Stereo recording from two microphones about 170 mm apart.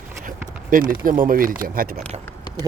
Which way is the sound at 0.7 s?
50° right (ahead or behind).